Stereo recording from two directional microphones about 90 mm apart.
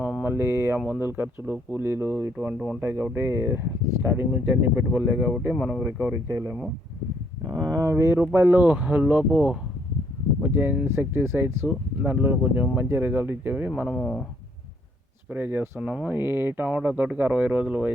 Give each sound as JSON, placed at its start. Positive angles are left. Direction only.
{"t": 0.0, "sound": "speech", "side_deg": -20}
{"t": 2.5, "sound": "speech", "side_deg": -10}
{"t": 2.8, "sound": "speech", "side_deg": -25}
{"t": 5.8, "sound": "speech", "side_deg": -20}
{"t": 6.2, "sound": "speech", "side_deg": -35}
{"t": 10.4, "sound": "speech", "side_deg": -20}
{"t": 14.0, "sound": "speech", "side_deg": 15}
{"t": 15.3, "sound": "speech", "side_deg": -20}
{"t": 15.8, "sound": "speech", "side_deg": -10}
{"t": 16.1, "sound": "speech", "side_deg": -25}
{"t": 16.6, "sound": "speech", "side_deg": -15}